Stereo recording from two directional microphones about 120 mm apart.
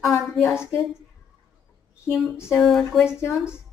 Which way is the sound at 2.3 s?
20° left (ahead or behind).